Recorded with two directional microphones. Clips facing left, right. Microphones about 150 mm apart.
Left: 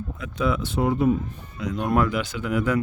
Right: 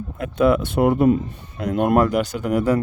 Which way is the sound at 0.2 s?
55° right (ahead or behind).